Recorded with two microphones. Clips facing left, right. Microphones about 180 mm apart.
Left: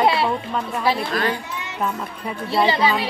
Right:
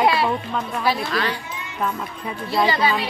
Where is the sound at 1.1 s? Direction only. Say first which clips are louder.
Left 2 dB; 45° left (ahead or behind).